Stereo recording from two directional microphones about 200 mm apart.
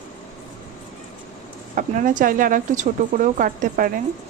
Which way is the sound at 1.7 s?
40° right (ahead or behind).